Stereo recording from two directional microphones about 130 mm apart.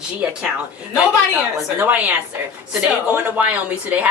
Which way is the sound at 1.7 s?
15° right (ahead or behind).